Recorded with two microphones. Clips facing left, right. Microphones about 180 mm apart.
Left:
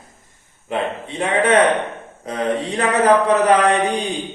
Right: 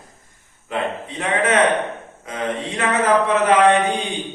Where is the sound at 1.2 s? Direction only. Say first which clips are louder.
Left 3 dB; 30° left (ahead or behind).